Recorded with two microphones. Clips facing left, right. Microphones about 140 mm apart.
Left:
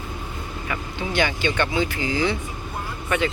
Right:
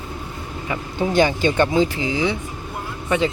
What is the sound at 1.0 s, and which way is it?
Speech, 40° right (ahead or behind).